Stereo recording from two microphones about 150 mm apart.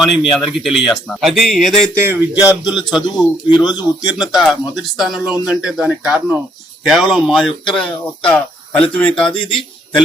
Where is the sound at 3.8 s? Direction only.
5° right (ahead or behind).